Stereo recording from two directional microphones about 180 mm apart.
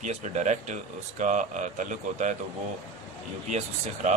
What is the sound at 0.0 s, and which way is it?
A man's voice, 40° right (ahead or behind).